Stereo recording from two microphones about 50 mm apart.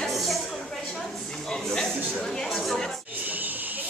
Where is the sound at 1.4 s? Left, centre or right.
Centre.